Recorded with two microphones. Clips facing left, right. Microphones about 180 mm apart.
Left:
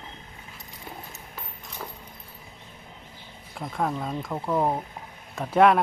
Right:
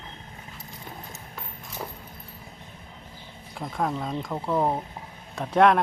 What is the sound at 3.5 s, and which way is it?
Speech, centre (ahead or behind).